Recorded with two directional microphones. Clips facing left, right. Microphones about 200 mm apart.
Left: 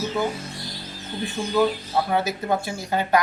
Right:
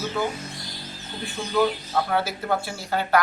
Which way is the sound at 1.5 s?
15° left (ahead or behind).